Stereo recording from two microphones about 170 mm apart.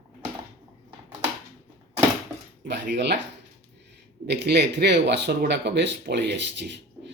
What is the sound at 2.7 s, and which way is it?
Speech, 90° right.